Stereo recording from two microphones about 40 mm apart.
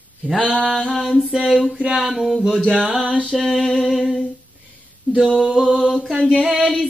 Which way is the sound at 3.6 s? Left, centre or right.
Centre.